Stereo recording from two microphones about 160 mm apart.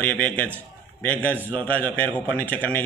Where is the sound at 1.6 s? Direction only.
10° left (ahead or behind).